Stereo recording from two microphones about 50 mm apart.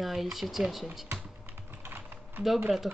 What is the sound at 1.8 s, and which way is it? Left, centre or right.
Typing, right.